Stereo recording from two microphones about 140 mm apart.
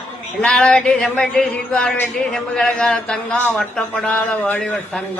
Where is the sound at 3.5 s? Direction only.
5° left (ahead or behind).